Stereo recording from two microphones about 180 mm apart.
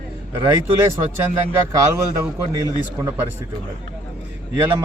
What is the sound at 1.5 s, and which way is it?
Speech, 15° right (ahead or behind).